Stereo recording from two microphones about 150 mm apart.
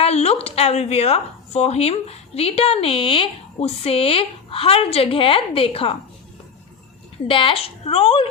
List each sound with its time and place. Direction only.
0.0 s speech: 45° left (ahead or behind)
7.3 s speech: 35° left (ahead or behind)